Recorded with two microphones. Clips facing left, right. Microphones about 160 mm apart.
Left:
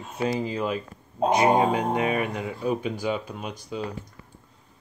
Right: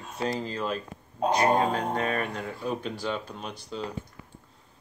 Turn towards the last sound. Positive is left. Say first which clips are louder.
# left 3 dB
turn(degrees=10)  # may be behind; listen again after turning